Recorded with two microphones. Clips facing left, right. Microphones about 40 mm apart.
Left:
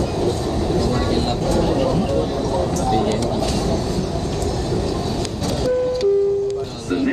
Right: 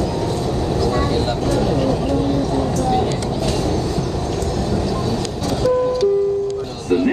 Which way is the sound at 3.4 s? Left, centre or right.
Centre.